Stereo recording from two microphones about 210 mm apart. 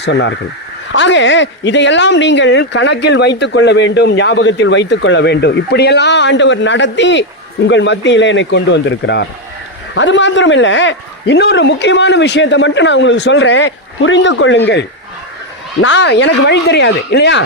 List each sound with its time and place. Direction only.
0.0 s speech: 60° left (ahead or behind)